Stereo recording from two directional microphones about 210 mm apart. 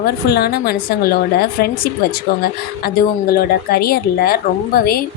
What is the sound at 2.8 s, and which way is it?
A woman's voice, 45° left (ahead or behind).